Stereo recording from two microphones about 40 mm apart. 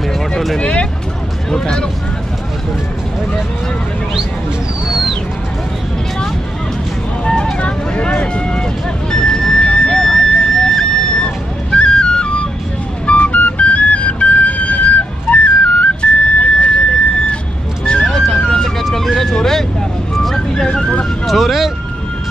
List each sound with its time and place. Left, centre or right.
0.6 s speech: left
1.5 s speech: centre
4.8 s a sound: centre
7.5 s vehicle: left
9.1 s music: centre
13.0 s flute: left
16.0 s a sound: left
18.0 s music: centre
21.3 s speech: centre